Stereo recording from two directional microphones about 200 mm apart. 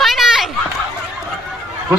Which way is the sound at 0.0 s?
Centre (ahead or behind).